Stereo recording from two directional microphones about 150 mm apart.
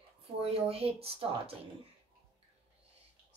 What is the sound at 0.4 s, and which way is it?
Speech, 40° right (ahead or behind).